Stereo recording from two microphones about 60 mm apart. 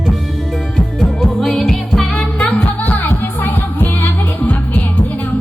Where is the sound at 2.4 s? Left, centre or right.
Left.